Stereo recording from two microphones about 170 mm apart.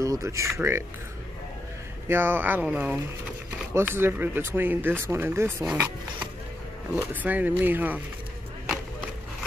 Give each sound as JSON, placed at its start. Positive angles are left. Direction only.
{"t": 0.0, "sound": "speech", "side_deg": -20}
{"t": 2.0, "sound": "speech", "side_deg": -15}
{"t": 7.0, "sound": "speech", "side_deg": -10}